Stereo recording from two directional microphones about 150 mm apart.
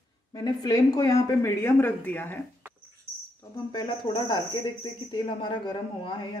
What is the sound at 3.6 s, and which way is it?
Speech, 30° left (ahead or behind).